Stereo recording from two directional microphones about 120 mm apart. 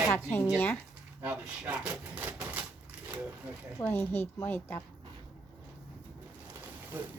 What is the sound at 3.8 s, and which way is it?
A woman's voice, 15° left (ahead or behind).